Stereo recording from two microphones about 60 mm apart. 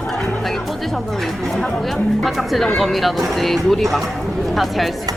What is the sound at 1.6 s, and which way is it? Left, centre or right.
A woman's voice, centre.